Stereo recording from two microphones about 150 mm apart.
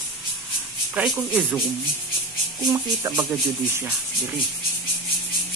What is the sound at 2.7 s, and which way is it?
Speech, 20° right (ahead or behind).